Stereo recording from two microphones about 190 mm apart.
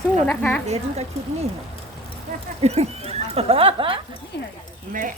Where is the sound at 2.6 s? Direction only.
35° right (ahead or behind).